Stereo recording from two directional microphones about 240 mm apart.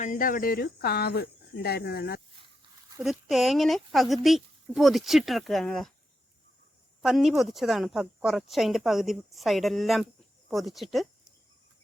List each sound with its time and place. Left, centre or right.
0.0 s speech: left
3.0 s a woman's voice: centre
7.0 s a woman's voice: centre